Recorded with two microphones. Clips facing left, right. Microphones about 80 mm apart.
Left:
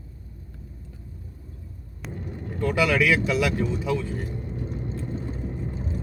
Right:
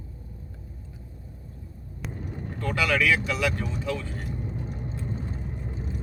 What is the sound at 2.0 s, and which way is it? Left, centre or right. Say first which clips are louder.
Speech: left 1 dB; centre.